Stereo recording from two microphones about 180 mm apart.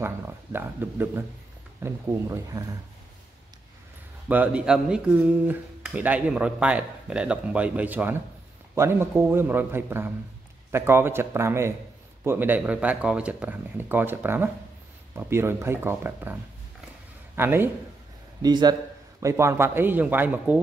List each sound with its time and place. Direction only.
0.0 s speech: 10° right (ahead or behind)
4.3 s speech: 10° right (ahead or behind)
17.4 s speech: 10° right (ahead or behind)
18.4 s a man's voice: 25° right (ahead or behind)